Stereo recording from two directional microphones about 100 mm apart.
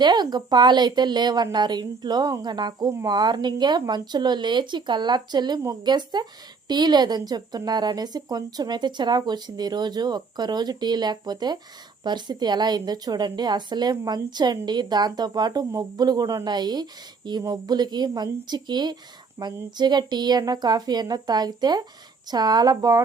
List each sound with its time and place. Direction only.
0.0 s a woman's voice: 45° right (ahead or behind)
19.4 s speech: 35° right (ahead or behind)
19.7 s a woman's voice: 45° right (ahead or behind)